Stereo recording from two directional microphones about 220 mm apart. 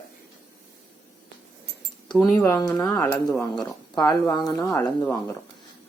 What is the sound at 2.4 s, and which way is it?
Speech, 15° left (ahead or behind).